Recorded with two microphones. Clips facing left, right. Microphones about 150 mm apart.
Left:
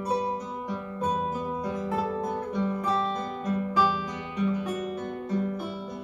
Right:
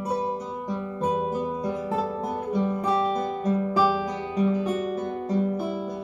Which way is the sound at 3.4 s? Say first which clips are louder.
Right 2 dB; 35° right (ahead or behind).